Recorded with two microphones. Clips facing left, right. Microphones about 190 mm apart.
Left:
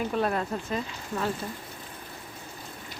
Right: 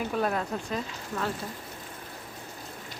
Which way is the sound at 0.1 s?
Centre (ahead or behind).